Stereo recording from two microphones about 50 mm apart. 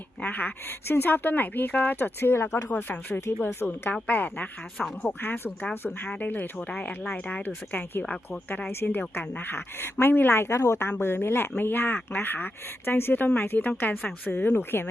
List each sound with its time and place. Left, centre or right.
0.2 s a woman's voice: left
2.3 s speech: left
3.9 s a woman's voice: left
5.7 s speech: left
6.1 s a woman's voice: left
11.0 s speech: left
13.2 s a woman's voice: left
13.5 s a woman's voice: left